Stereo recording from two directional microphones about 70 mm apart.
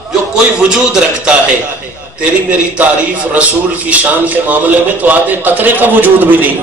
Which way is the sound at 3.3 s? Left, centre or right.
Centre.